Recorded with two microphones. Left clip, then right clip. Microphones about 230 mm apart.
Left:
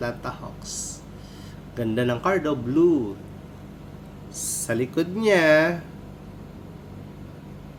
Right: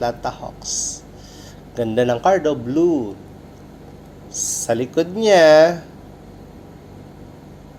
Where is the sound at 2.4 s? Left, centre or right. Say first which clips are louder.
Right 4 dB; left.